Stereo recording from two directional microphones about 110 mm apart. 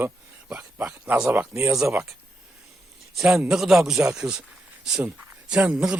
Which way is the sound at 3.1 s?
5° right (ahead or behind).